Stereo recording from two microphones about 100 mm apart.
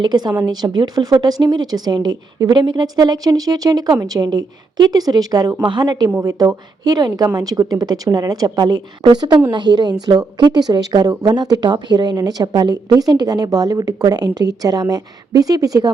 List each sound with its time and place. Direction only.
0.0 s a woman's voice: 45° right (ahead or behind)
5.6 s a woman's voice: 50° right (ahead or behind)